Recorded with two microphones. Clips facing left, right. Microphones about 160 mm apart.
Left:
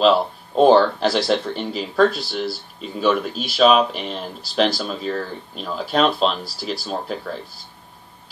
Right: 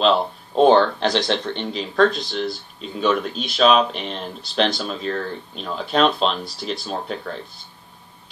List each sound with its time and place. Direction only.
0.0 s speech: 5° left (ahead or behind)